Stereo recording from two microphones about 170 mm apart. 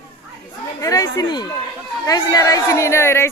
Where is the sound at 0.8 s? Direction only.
20° left (ahead or behind).